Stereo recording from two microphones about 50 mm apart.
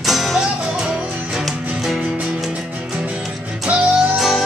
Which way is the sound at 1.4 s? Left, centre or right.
Centre.